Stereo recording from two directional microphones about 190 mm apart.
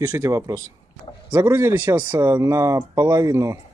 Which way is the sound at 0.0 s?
15° right (ahead or behind).